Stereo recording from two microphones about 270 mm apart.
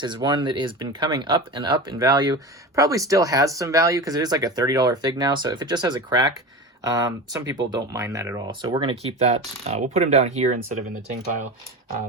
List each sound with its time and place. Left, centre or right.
0.0 s speech: centre